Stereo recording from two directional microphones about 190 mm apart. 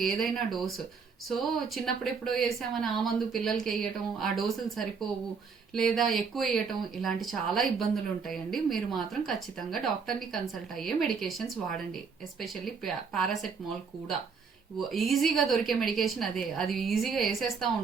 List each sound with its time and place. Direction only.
0.0 s a woman's voice: centre (ahead or behind)
14.8 s a woman's voice: centre (ahead or behind)